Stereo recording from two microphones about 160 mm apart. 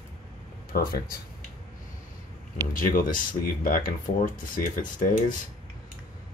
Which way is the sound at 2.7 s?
60° left (ahead or behind).